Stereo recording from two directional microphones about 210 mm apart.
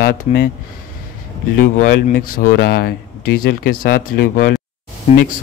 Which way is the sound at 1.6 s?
40° left (ahead or behind).